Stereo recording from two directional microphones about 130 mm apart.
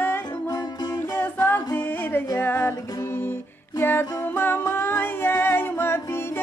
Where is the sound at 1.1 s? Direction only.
15° left (ahead or behind).